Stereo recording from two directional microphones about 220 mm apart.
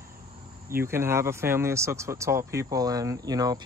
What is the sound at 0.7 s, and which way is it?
Speech, 10° right (ahead or behind).